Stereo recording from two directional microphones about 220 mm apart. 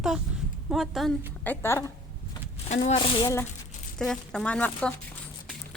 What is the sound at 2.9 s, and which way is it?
Speech, 20° left (ahead or behind).